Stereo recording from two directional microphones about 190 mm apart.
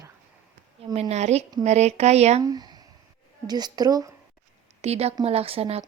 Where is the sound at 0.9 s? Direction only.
35° right (ahead or behind).